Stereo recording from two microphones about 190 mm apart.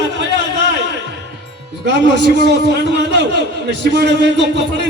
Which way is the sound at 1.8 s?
65° right (ahead or behind).